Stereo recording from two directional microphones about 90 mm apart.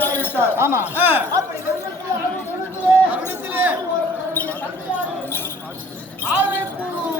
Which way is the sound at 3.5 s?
20° right (ahead or behind).